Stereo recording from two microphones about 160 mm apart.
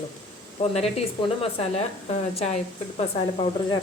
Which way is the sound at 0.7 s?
40° left (ahead or behind).